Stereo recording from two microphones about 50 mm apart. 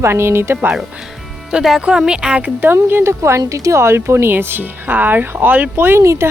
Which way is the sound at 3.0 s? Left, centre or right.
Right.